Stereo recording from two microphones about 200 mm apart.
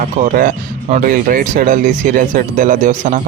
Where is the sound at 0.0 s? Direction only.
45° right (ahead or behind).